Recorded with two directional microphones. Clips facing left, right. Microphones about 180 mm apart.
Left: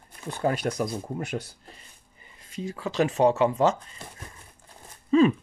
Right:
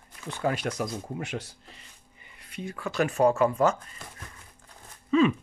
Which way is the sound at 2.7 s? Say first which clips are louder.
Left 2 dB; 20° left (ahead or behind).